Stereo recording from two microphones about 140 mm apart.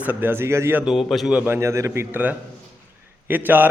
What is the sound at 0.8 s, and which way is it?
A man's voice, centre (ahead or behind).